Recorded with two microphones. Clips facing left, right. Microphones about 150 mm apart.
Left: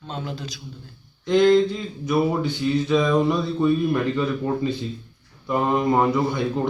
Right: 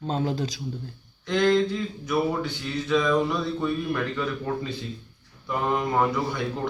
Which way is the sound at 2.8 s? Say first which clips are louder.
Left 1 dB; 20° left (ahead or behind).